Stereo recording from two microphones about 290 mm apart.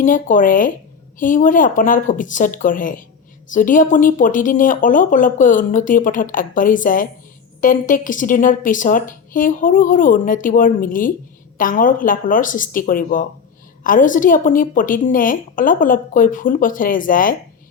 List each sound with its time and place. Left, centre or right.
0.0 s a woman's voice: left